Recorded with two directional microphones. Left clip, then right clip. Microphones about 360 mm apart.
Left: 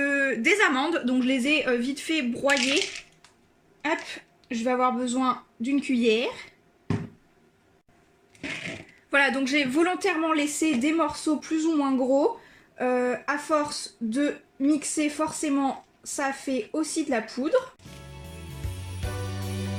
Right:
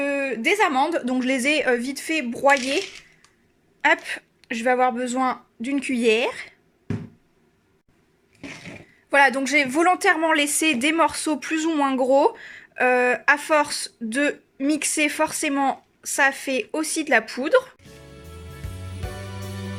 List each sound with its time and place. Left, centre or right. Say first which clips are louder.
0.0 s a woman's voice: even; centre
3.8 s speech: right 9 dB; right
9.0 s a woman's voice: right 5 dB; centre
11.9 s speech: right 4 dB; right
12.7 s speech: right 6 dB; right